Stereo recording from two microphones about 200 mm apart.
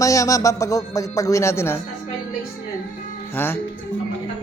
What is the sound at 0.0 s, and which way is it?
A man's voice, 15° left (ahead or behind).